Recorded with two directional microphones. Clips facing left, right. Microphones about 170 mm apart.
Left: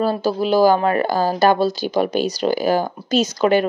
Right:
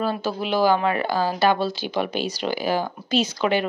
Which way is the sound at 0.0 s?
35° left (ahead or behind).